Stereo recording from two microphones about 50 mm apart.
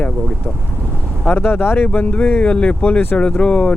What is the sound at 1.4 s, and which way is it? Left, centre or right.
Speech, left.